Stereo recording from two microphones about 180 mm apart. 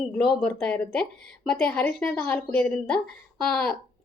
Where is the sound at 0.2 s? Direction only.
5° left (ahead or behind).